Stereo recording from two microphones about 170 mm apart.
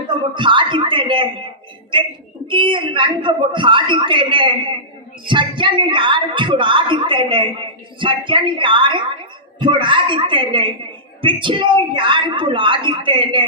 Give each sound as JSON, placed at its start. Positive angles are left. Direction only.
{"t": 0.3, "sound": "speech", "side_deg": -30}